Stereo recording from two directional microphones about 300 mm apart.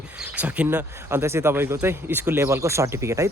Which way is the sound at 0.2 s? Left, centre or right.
Centre.